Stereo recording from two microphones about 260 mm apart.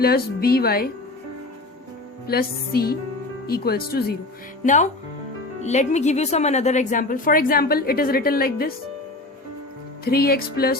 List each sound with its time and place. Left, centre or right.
0.0 s a woman's voice: left
2.2 s a woman's voice: left
10.0 s a woman's voice: left